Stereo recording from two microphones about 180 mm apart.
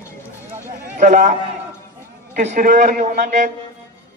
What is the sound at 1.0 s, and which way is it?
Speech, 45° right (ahead or behind).